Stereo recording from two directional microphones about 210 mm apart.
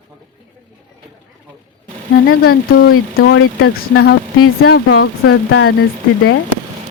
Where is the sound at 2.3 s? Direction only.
75° left (ahead or behind).